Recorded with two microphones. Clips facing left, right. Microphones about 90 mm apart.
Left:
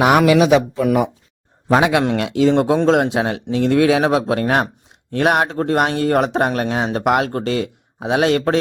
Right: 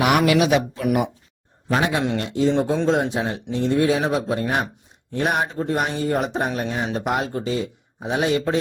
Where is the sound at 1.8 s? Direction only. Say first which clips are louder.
Left 5 dB; 90° left.